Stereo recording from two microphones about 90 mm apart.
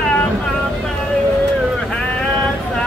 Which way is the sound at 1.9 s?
15° left (ahead or behind).